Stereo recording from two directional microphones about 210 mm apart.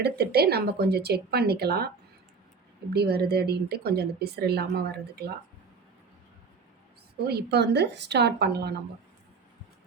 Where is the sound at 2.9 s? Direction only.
50° right (ahead or behind).